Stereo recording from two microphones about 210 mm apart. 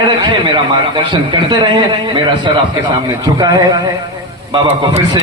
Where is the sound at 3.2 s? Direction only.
20° right (ahead or behind).